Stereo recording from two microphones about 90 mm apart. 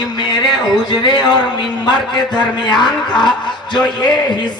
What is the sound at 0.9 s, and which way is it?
A man's voice, 55° left (ahead or behind).